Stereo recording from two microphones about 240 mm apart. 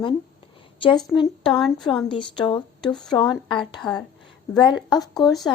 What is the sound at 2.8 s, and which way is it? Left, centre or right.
Speech, centre.